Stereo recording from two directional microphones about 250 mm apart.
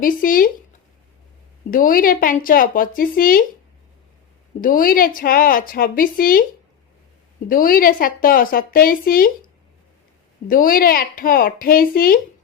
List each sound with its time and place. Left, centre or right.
0.0 s a woman's voice: left
1.7 s a woman's voice: left
4.6 s a woman's voice: left
7.4 s a woman's voice: left
10.5 s a woman's voice: left